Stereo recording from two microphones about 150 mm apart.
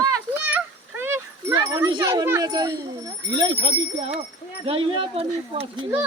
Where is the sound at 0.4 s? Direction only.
15° right (ahead or behind).